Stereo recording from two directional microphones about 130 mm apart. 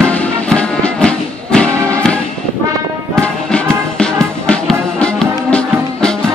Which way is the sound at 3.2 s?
5° left (ahead or behind).